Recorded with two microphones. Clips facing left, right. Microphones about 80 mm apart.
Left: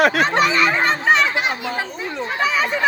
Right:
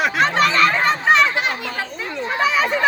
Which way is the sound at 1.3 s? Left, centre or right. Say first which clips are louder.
Left 1 dB; centre.